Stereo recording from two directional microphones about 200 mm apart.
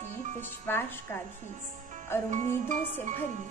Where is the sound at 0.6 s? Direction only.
10° left (ahead or behind).